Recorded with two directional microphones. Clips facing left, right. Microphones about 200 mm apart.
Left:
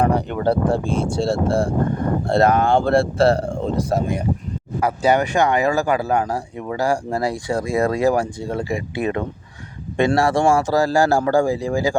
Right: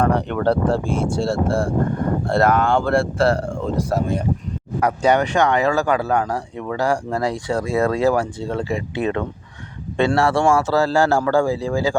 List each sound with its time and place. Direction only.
0.0 s speech: 10° left (ahead or behind)
4.8 s speech: 5° left (ahead or behind)